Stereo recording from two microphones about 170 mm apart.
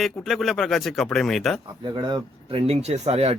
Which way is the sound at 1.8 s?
25° right (ahead or behind).